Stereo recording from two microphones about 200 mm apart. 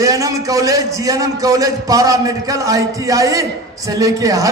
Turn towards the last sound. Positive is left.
turn(degrees=-15)  # may be behind; listen again after turning